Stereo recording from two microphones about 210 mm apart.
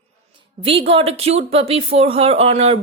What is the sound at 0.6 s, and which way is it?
Speech, 25° right (ahead or behind).